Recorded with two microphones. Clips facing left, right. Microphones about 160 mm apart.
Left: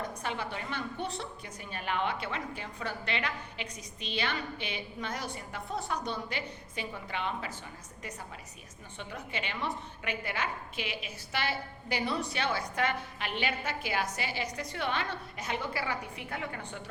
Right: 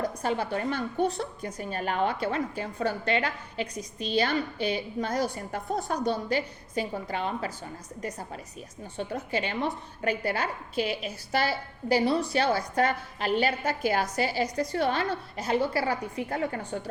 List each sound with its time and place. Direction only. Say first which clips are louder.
0.0 s a woman's voice: right 7 dB; 40° right (ahead or behind)
9.0 s a woman's voice: right 9 dB; 40° right (ahead or behind)